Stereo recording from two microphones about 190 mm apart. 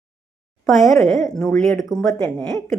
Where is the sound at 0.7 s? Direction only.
Centre (ahead or behind).